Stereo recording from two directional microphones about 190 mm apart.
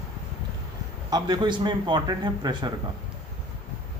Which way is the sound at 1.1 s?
20° right (ahead or behind).